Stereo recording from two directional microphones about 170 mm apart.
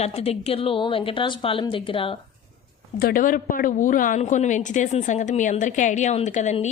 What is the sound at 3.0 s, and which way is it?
A woman's voice, 55° left (ahead or behind).